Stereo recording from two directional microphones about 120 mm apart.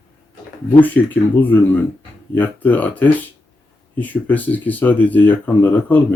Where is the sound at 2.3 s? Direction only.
15° left (ahead or behind).